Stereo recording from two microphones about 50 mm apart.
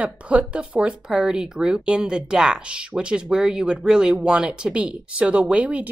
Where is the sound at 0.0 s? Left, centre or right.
Right.